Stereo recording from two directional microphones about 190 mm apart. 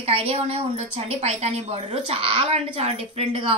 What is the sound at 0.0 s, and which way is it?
A woman's voice, 30° right (ahead or behind).